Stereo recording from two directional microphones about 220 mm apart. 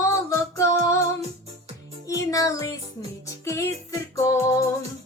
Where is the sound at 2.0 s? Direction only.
15° left (ahead or behind).